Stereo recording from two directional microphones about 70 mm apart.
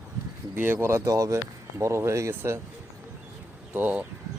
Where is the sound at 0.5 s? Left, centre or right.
Right.